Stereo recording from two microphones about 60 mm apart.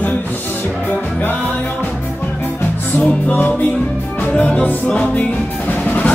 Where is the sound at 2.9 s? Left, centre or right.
Left.